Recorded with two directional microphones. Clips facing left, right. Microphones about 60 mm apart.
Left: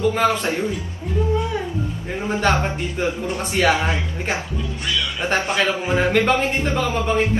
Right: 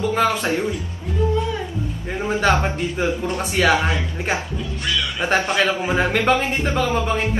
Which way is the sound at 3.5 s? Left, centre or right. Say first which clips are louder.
Right 1 dB; right.